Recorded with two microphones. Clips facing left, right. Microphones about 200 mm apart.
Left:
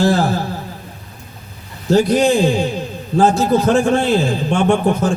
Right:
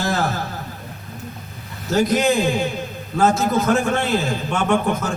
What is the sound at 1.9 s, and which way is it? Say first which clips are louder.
A man's voice: left 5 dB; 30° left (ahead or behind).